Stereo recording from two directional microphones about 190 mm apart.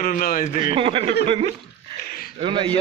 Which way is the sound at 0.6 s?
30° right (ahead or behind).